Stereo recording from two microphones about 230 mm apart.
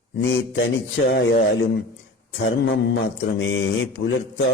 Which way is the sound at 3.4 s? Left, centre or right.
Left.